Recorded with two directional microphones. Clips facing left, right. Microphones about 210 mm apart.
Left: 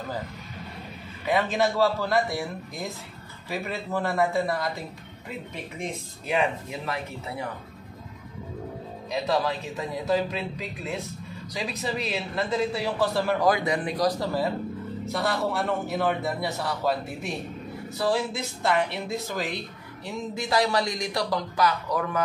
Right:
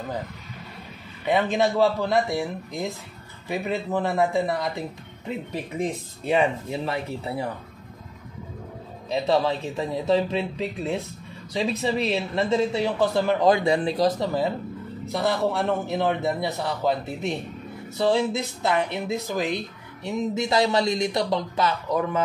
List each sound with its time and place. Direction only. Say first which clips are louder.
1.2 s a man's voice: right 2 dB; 20° right (ahead or behind)
5.5 s speech: right 7 dB; 35° right (ahead or behind)
9.1 s a man's voice: right 4 dB; 30° right (ahead or behind)
15.0 s a man's voice: right 4 dB; centre (ahead or behind)
16.8 s a man's voice: right 4 dB; 20° right (ahead or behind)